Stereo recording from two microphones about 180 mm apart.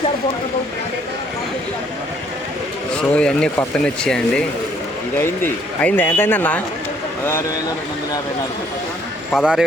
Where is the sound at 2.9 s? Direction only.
5° left (ahead or behind).